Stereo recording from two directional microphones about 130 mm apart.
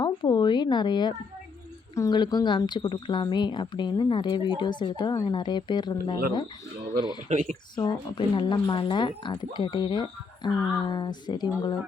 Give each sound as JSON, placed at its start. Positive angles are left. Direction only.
{"t": 0.0, "sound": "speech", "side_deg": 35}
{"t": 7.3, "sound": "speech", "side_deg": -70}
{"t": 7.9, "sound": "speech", "side_deg": 35}